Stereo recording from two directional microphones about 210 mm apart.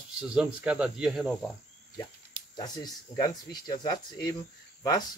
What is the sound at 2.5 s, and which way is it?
Speech, 20° left (ahead or behind).